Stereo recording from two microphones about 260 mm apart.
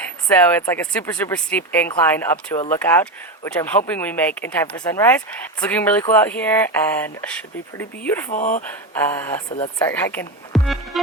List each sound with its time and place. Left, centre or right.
0.3 s speech: centre
8.3 s speech: left
9.0 s speech: centre